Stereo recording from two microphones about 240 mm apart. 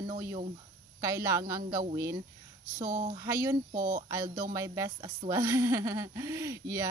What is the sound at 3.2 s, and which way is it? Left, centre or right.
Speech, centre.